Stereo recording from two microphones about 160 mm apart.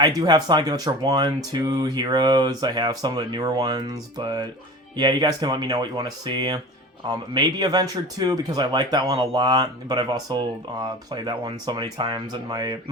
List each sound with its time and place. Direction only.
0.0 s speech: 25° right (ahead or behind)